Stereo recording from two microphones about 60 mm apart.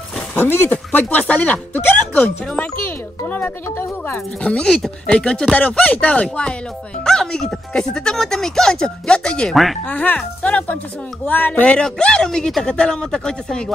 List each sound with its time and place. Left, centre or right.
0.4 s speech: left
3.3 s speech: left
4.6 s a woman's voice: centre
9.5 s speech: centre
9.8 s a woman's voice: left; by 13.7 s centre